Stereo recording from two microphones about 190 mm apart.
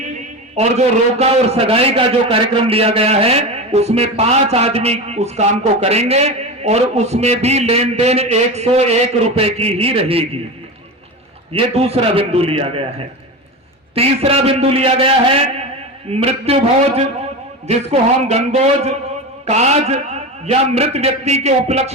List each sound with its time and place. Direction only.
0.6 s a man's voice: 35° right (ahead or behind)
11.5 s a man's voice: 30° right (ahead or behind)
13.9 s a man's voice: 30° right (ahead or behind)